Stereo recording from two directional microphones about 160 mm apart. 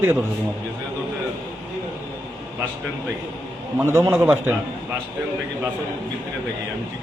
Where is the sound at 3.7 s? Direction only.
15° right (ahead or behind).